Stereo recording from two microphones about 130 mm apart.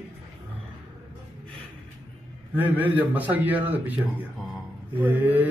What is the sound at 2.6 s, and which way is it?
A man's voice, 15° right (ahead or behind).